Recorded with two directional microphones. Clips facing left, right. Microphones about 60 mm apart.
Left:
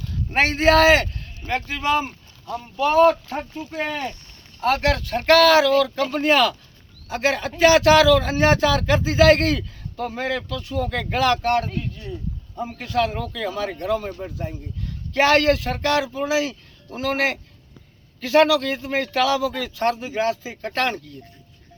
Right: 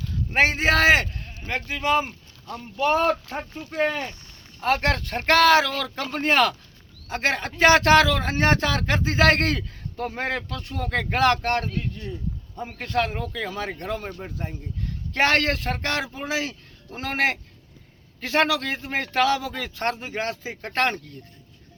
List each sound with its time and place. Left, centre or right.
0.3 s speech: centre
2.7 s speech: right
4.8 s a man's voice: right
12.8 s a man's voice: right
13.3 s a man's voice: right
15.1 s a man's voice: right